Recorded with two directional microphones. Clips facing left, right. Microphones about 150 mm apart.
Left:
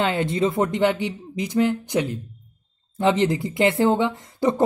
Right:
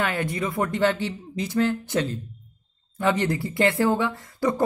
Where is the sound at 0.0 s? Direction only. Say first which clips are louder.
Left 5 dB; 25° left (ahead or behind).